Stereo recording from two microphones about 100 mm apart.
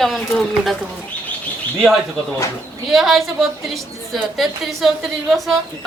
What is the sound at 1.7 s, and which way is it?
A woman's voice, centre (ahead or behind).